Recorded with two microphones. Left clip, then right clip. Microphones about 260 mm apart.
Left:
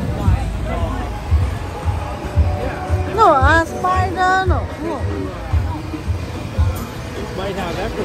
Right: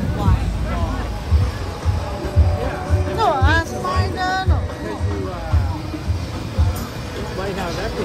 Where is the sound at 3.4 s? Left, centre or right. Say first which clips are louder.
Left 5 dB; centre.